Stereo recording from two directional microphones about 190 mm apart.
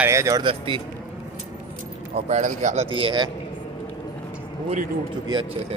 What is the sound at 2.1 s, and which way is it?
Speech, 35° right (ahead or behind).